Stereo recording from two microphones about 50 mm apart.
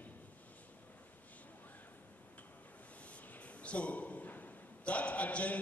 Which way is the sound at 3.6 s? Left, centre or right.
Left.